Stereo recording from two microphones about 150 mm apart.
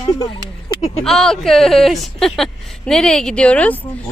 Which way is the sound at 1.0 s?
5° left (ahead or behind).